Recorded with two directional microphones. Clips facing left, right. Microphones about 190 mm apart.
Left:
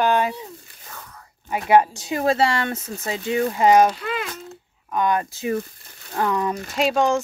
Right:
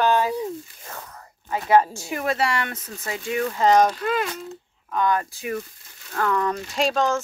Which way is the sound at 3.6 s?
10° left (ahead or behind).